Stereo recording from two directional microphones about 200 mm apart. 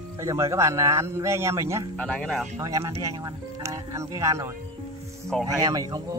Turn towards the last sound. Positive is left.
turn(degrees=-20)  # may be behind; listen again after turning